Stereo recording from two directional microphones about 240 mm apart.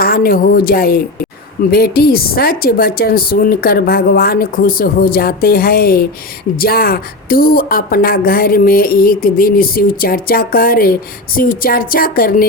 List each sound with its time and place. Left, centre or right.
0.0 s speech: left